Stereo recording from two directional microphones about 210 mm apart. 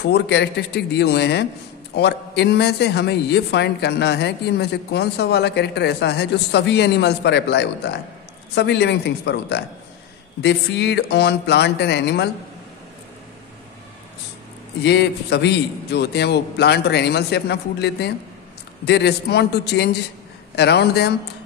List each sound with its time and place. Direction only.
0.0 s speech: 55° left (ahead or behind)
14.8 s speech: 55° left (ahead or behind)